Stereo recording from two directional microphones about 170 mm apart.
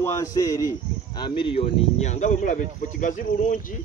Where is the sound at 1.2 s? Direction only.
30° left (ahead or behind); by 3.6 s 45° left (ahead or behind).